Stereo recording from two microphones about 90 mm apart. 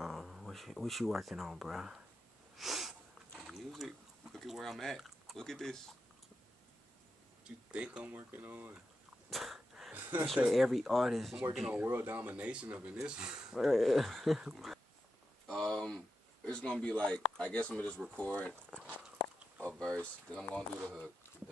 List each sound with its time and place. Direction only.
0.0 s speech: centre (ahead or behind)
2.5 s sneeze: centre (ahead or behind)
3.3 s speech: 5° right (ahead or behind)
7.4 s speech: 10° right (ahead or behind)
9.3 s sneeze: centre (ahead or behind)
9.9 s a sound: 20° right (ahead or behind)
10.5 s speech: centre (ahead or behind)
11.7 s speech: 20° right (ahead or behind); by 14.8 s 5° right (ahead or behind)
15.4 s a sound: 10° left (ahead or behind)
16.4 s speech: 10° left (ahead or behind)
19.7 s speech: 10° left (ahead or behind)